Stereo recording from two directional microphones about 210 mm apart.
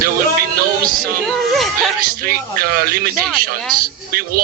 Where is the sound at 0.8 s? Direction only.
45° right (ahead or behind).